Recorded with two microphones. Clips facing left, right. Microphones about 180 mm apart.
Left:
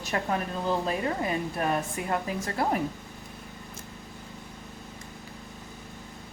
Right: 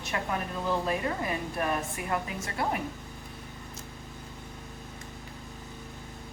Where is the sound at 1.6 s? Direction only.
35° left (ahead or behind).